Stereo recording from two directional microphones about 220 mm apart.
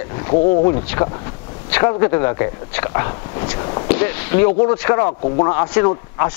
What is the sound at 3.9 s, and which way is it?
Speech, 10° left (ahead or behind).